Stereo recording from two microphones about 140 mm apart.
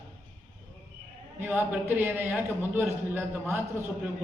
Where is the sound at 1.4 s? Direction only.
15° right (ahead or behind).